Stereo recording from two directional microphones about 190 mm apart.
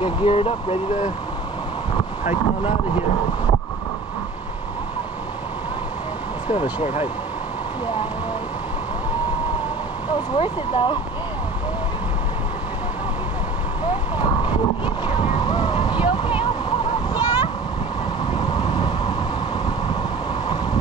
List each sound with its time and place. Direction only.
0.0 s speech: 30° left (ahead or behind)
6.5 s speech: 30° left (ahead or behind)
10.3 s speech: 25° left (ahead or behind)
15.0 s a sound: 25° left (ahead or behind)